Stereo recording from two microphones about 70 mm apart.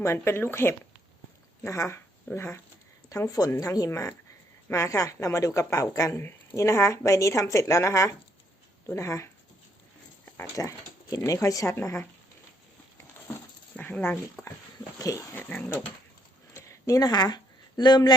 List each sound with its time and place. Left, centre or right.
0.0 s speech: left
3.1 s a woman's voice: left
3.8 s a woman's voice: left
10.5 s a woman's voice: left
11.7 s speech: left
13.7 s speech: left
14.4 s speech: left
14.9 s dog: left
15.4 s speech: left
16.6 s a sound: left
17.1 s speech: left